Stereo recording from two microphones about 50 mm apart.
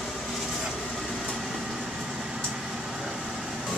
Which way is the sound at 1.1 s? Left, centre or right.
Centre.